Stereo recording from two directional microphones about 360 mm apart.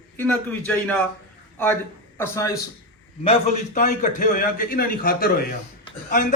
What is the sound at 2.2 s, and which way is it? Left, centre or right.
A man's voice, centre.